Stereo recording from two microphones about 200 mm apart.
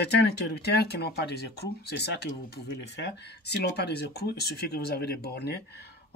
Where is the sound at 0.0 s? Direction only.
55° left (ahead or behind).